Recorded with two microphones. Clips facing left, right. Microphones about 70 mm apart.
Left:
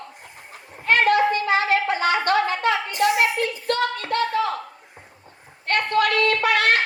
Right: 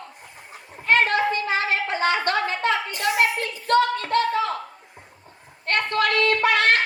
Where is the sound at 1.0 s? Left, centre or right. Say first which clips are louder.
Left 4 dB; right.